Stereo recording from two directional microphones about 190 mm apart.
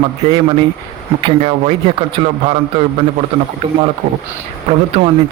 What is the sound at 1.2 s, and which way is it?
A man's voice, 30° right (ahead or behind).